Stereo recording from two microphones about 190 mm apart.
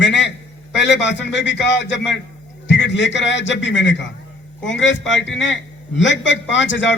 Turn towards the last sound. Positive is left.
turn(degrees=75)  # may be behind; listen again after turning